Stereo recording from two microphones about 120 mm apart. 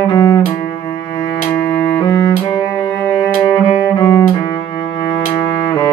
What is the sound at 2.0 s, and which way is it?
Music, 35° left (ahead or behind).